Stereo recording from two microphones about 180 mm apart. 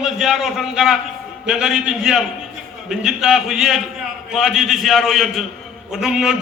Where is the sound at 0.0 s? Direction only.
Centre (ahead or behind).